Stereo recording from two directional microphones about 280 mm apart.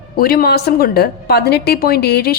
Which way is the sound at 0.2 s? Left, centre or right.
Left.